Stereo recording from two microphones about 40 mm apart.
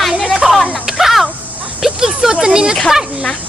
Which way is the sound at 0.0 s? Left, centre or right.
Centre.